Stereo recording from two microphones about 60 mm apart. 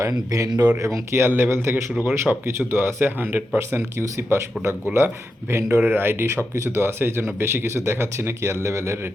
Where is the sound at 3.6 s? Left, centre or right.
Right.